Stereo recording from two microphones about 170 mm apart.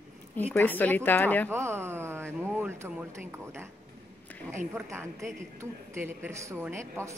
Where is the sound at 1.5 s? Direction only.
15° right (ahead or behind).